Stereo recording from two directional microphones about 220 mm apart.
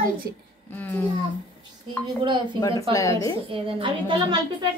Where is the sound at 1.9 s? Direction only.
20° right (ahead or behind).